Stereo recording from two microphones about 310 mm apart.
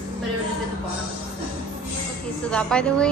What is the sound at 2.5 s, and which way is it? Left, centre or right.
Speech, centre.